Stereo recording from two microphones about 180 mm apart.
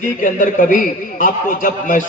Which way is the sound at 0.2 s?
45° left (ahead or behind).